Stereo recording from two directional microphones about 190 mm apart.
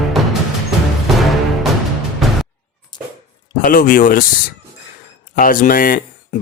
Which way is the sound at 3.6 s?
50° left (ahead or behind).